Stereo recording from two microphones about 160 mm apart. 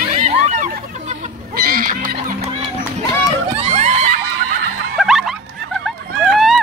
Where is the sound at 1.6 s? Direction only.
65° right (ahead or behind).